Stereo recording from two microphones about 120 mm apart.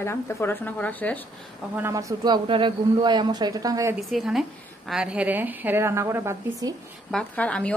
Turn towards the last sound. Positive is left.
turn(degrees=10)  # may be behind; listen again after turning